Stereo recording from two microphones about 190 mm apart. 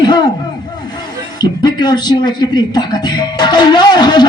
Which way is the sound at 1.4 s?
20° left (ahead or behind).